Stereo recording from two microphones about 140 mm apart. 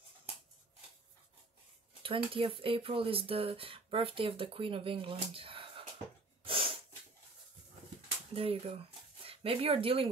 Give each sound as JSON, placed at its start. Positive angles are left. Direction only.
{"t": 2.0, "sound": "speech", "side_deg": -40}
{"t": 6.4, "sound": "sneeze", "side_deg": -40}
{"t": 8.4, "sound": "speech", "side_deg": -45}